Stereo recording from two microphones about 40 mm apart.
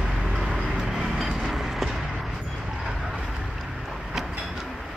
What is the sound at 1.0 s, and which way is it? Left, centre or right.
Vehicle, centre.